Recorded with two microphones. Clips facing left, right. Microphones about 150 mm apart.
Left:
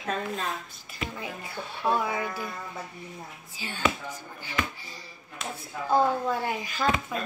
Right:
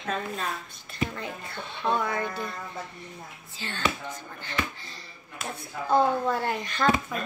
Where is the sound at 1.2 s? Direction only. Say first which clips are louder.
Even; 10° left (ahead or behind).